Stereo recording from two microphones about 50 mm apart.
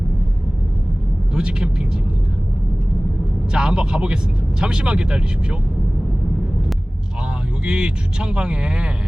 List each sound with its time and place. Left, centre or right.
1.3 s speech: centre
3.5 s speech: centre
7.6 s speech: centre